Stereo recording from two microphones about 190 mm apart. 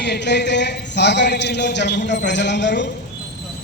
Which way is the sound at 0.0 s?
65° left (ahead or behind).